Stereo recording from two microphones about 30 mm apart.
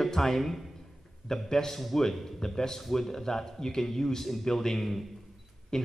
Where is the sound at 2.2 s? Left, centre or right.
Centre.